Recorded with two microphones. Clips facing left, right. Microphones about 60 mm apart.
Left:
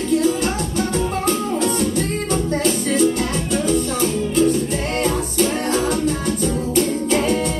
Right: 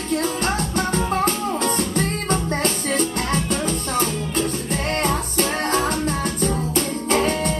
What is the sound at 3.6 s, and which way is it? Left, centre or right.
Music, right.